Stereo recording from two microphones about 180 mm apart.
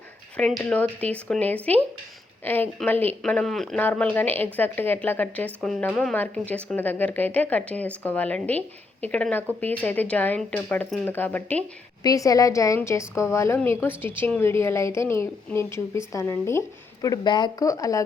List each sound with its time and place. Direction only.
0.3 s speech: 5° left (ahead or behind)